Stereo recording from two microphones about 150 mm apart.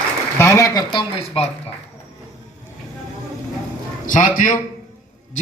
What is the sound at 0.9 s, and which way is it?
Speech, 35° left (ahead or behind).